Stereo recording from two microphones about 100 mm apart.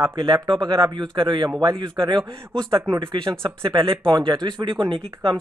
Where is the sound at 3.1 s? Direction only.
60° right (ahead or behind).